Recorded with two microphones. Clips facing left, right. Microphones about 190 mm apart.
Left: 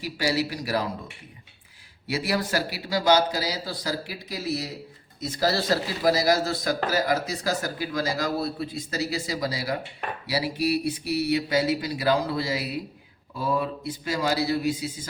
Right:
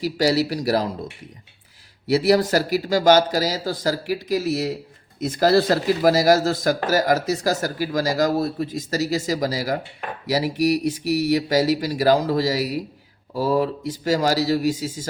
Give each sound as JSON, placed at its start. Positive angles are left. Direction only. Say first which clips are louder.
{"t": 0.2, "sound": "speech", "louder": "right 6 dB", "side_deg": -40}
{"t": 2.2, "sound": "speech", "louder": "right 8 dB", "side_deg": -40}